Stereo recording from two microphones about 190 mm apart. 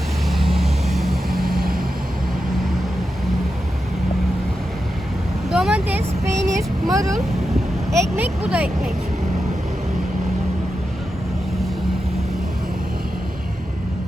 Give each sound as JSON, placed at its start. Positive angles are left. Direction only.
{"t": 0.3, "sound": "vehicle", "side_deg": 0}
{"t": 1.3, "sound": "vehicle", "side_deg": -50}
{"t": 5.5, "sound": "vehicle", "side_deg": -5}
{"t": 7.9, "sound": "speech", "side_deg": -15}